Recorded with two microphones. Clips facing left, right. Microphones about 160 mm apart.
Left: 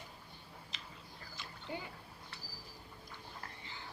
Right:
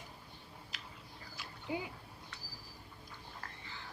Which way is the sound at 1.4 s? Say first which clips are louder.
Right 4 dB; 10° right (ahead or behind).